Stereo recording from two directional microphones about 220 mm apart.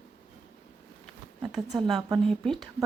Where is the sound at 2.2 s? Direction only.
Centre (ahead or behind).